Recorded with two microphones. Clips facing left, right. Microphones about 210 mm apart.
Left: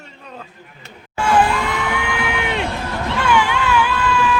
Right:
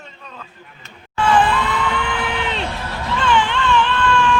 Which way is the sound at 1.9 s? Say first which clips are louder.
Left 1 dB; 10° left (ahead or behind).